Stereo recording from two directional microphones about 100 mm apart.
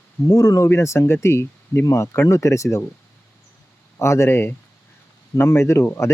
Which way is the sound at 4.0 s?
25° left (ahead or behind).